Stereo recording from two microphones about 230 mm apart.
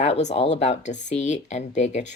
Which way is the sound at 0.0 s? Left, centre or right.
Left.